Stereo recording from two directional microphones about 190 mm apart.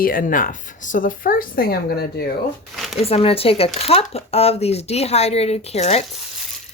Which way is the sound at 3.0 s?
30° left (ahead or behind).